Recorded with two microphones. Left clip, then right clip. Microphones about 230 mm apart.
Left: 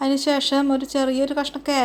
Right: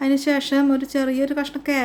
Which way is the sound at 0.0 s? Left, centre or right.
Centre.